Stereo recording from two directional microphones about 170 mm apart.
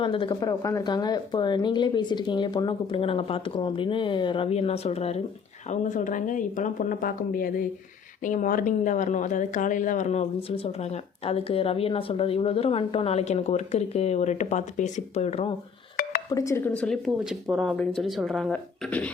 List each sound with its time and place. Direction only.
0.0 s speech: 30° left (ahead or behind)
16.3 s speech: 20° left (ahead or behind)